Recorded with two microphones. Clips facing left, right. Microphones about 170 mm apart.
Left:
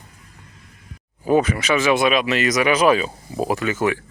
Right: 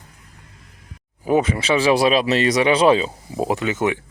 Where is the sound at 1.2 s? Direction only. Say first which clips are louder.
Left 1 dB; 20° right (ahead or behind).